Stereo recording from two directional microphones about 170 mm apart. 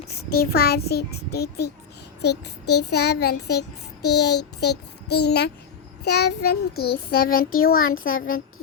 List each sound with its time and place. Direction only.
0.1 s a child's voice: 65° left (ahead or behind)
7.1 s child singing: 60° left (ahead or behind)